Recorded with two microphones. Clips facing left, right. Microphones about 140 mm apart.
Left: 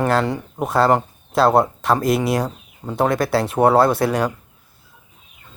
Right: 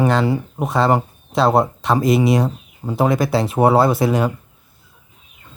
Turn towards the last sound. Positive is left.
turn(degrees=0)  # may be behind; listen again after turning